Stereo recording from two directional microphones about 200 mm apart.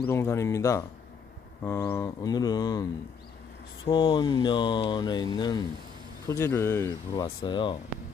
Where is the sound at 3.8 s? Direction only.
25° left (ahead or behind).